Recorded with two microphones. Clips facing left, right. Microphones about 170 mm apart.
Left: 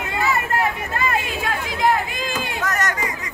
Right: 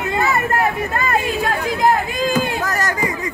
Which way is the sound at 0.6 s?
45° right (ahead or behind).